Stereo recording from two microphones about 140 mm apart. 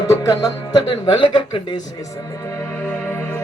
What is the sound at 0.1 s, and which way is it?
Music, 25° left (ahead or behind).